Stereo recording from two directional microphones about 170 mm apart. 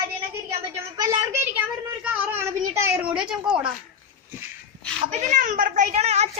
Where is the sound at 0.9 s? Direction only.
15° right (ahead or behind).